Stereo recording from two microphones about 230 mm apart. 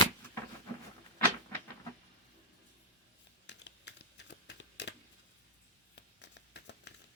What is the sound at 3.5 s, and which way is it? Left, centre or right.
Crumpling, left.